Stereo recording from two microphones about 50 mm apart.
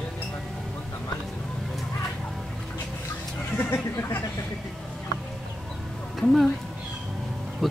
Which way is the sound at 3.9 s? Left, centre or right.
Left.